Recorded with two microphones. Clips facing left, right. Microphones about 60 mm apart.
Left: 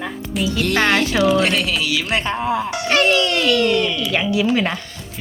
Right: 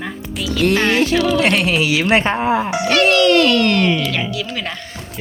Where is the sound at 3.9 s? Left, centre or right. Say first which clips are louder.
Right 5 dB; right.